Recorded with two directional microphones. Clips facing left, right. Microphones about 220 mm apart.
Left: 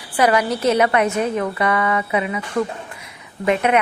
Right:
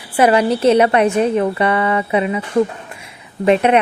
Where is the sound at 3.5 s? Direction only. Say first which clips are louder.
Right 5 dB; 30° right (ahead or behind).